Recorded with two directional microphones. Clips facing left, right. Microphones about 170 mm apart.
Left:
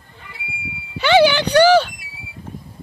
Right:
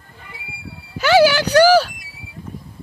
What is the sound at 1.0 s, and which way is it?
Speech, 5° right (ahead or behind).